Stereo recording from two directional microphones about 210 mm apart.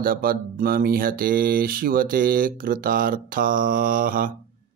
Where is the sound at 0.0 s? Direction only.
45° right (ahead or behind).